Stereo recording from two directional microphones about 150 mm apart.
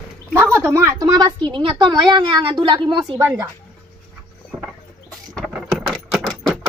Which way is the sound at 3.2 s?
20° right (ahead or behind).